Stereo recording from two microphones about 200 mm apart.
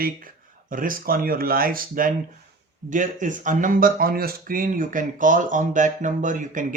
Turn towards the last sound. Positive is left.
turn(degrees=-40)  # may be behind; listen again after turning